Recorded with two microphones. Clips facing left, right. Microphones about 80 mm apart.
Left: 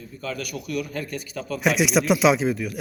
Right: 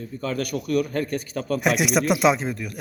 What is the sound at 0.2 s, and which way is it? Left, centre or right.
A man's voice, right.